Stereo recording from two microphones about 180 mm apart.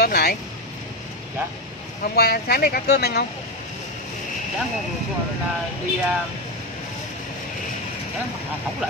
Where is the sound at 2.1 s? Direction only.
60° left (ahead or behind).